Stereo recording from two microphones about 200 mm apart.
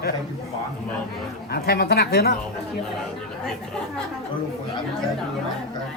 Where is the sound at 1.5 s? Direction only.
50° left (ahead or behind).